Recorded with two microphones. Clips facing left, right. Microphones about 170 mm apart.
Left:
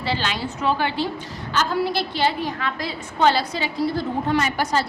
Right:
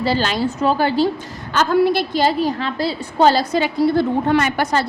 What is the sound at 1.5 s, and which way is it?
A woman's voice, 55° right (ahead or behind).